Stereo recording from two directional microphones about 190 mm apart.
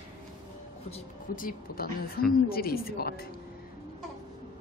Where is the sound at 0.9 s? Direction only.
45° left (ahead or behind).